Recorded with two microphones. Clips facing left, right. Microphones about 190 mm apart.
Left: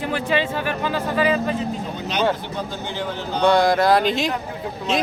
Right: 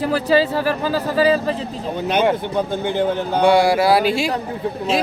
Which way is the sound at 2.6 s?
55° right (ahead or behind).